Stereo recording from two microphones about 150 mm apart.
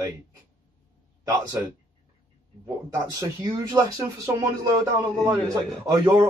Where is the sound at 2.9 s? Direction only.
25° right (ahead or behind).